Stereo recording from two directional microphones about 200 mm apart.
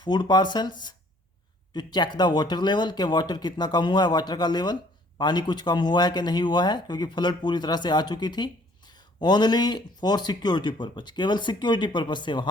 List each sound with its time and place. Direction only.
0.0 s speech: 20° left (ahead or behind)